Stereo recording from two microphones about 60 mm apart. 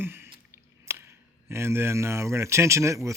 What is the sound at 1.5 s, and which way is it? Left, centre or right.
Speech, right.